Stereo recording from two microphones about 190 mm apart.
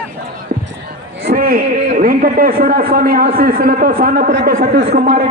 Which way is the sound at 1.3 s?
50° right (ahead or behind).